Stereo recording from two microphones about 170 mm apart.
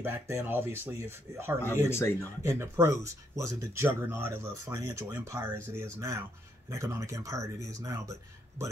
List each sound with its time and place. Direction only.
0.0 s speech: 15° right (ahead or behind)
1.9 s speech: 15° left (ahead or behind)
2.4 s speech: 15° right (ahead or behind)